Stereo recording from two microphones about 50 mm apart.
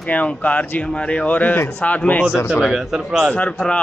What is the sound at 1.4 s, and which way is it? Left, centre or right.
Speech, left.